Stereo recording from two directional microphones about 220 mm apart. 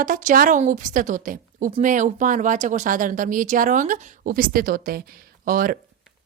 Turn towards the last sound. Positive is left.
turn(degrees=-40)  # may be behind; listen again after turning